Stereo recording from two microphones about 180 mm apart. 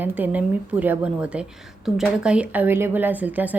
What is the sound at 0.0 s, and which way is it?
A woman's voice, 10° right (ahead or behind).